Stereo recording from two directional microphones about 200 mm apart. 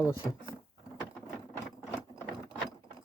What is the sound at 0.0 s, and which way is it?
Speech, 20° left (ahead or behind).